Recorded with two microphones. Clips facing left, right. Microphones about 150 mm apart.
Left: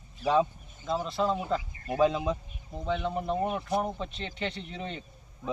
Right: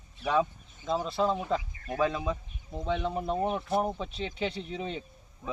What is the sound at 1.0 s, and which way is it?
Speech, centre (ahead or behind).